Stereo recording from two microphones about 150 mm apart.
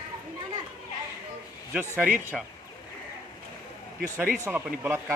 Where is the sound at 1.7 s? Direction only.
10° right (ahead or behind).